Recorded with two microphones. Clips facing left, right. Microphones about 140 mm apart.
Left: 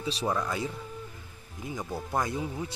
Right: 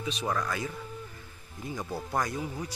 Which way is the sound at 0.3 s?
10° left (ahead or behind).